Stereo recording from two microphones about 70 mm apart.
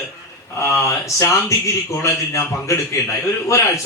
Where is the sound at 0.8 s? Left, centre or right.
Left.